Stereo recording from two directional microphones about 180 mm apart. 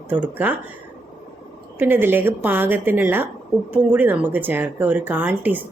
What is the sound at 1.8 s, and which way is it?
Speech, 10° right (ahead or behind).